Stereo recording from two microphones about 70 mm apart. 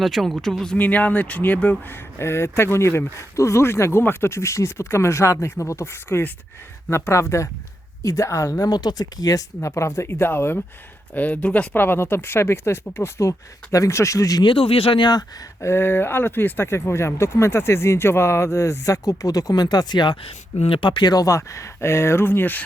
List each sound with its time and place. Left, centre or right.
0.0 s speech: centre
0.8 s speech: left
1.9 s speech: left
8.7 s speech: left
9.6 s speech: left; by 11.8 s centre
11.8 s speech: left
15.6 s speech: left
21.2 s speech: left